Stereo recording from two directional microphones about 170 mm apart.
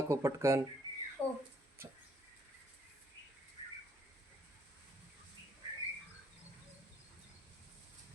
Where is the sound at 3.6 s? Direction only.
30° left (ahead or behind).